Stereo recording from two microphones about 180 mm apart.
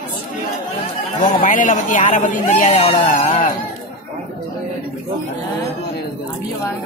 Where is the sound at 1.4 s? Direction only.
45° left (ahead or behind).